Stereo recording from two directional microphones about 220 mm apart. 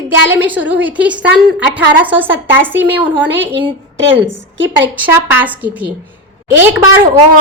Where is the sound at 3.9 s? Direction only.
60° right (ahead or behind).